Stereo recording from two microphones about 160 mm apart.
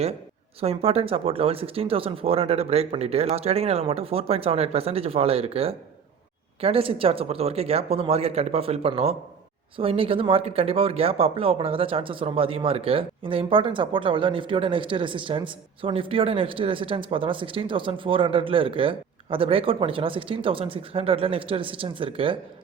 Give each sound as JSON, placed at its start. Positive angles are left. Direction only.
{"t": 0.6, "sound": "speech", "side_deg": -40}